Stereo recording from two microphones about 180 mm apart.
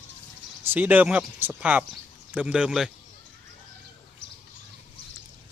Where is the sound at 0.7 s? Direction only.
10° right (ahead or behind).